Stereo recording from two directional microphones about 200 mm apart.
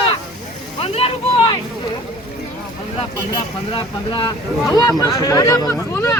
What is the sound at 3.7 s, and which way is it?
Speech, 20° left (ahead or behind).